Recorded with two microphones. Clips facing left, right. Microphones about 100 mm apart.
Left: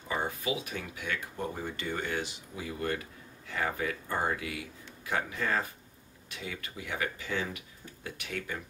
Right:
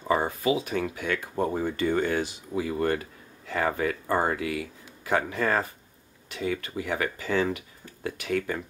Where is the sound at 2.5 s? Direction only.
90° right.